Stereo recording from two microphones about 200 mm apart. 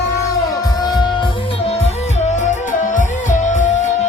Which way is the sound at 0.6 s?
20° left (ahead or behind).